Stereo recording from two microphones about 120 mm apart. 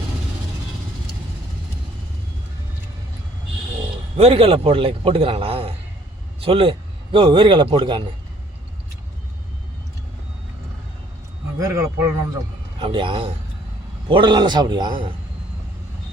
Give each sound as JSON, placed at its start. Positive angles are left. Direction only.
{"t": 4.2, "sound": "a man's voice", "side_deg": -55}
{"t": 11.6, "sound": "a man's voice", "side_deg": -20}
{"t": 12.8, "sound": "a man's voice", "side_deg": -45}